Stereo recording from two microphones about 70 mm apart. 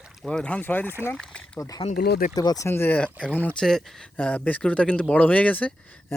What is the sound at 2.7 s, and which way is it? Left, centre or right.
Speech, left.